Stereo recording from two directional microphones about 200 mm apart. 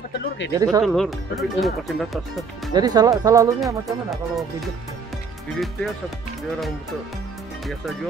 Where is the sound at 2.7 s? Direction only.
20° right (ahead or behind).